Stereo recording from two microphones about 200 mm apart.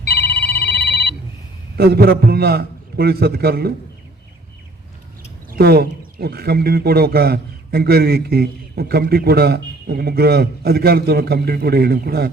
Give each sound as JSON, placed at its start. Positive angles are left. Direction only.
{"t": 0.0, "sound": "ringtone", "side_deg": 55}
{"t": 1.8, "sound": "speech", "side_deg": -50}
{"t": 5.5, "sound": "speech", "side_deg": -50}